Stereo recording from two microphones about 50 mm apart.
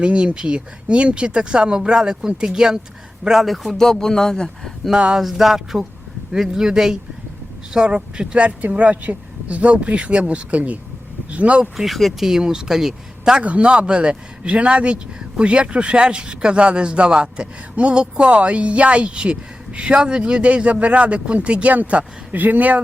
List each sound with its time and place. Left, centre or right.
0.0 s speech: right
3.4 s speech: centre
4.9 s speech: right
5.2 s music: centre
6.3 s speech: centre; by 11.7 s right
11.8 s music: centre
12.3 s speech: centre
13.4 s speech: right